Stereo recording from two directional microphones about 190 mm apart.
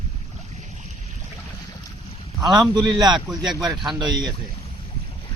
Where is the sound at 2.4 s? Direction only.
20° right (ahead or behind).